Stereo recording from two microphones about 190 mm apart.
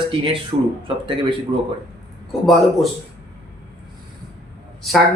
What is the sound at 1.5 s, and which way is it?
Speech, 25° right (ahead or behind).